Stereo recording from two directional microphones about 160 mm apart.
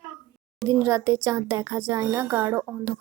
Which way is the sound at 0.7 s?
20° right (ahead or behind).